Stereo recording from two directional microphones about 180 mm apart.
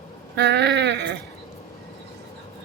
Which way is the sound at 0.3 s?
70° right (ahead or behind).